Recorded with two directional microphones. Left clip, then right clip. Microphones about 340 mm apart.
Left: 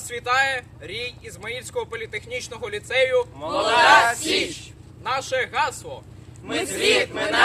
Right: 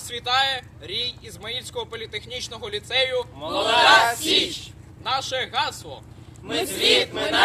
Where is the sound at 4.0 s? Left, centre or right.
Centre.